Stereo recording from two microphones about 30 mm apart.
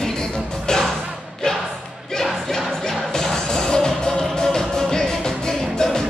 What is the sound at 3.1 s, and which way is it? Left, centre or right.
Music, centre.